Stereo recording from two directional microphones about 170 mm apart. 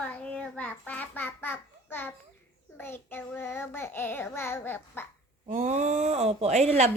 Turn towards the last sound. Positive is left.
turn(degrees=-40)  # may be behind; listen again after turning